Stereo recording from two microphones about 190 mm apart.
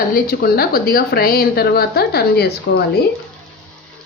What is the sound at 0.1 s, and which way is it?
Speech, 55° left (ahead or behind).